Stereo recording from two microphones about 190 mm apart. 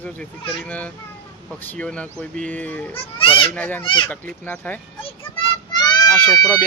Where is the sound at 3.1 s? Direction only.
25° left (ahead or behind).